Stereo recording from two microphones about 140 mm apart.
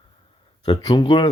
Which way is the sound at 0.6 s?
30° left (ahead or behind).